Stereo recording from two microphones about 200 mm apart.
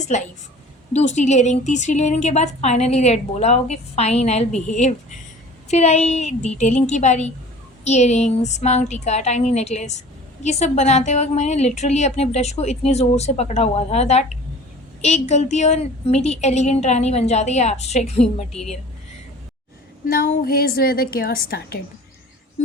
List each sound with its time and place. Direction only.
0.0 s a woman's voice: 35° left (ahead or behind)
20.1 s a woman's voice: 50° left (ahead or behind)